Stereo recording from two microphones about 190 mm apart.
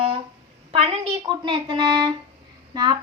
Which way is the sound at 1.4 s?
25° right (ahead or behind).